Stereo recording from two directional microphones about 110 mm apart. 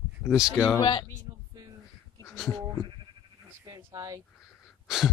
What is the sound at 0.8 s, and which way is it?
Speech, 45° left (ahead or behind).